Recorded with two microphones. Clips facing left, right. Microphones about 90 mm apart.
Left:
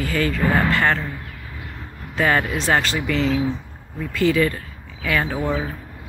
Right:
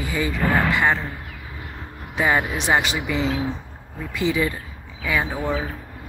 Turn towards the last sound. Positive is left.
turn(degrees=-10)  # may be behind; listen again after turning